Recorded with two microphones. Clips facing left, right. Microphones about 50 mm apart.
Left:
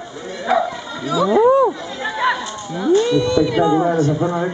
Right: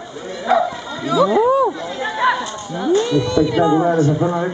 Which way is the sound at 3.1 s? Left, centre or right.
Left.